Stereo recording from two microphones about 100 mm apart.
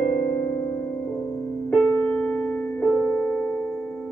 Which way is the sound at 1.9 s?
15° left (ahead or behind).